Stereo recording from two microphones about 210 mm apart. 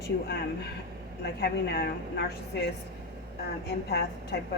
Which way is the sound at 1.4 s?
50° left (ahead or behind).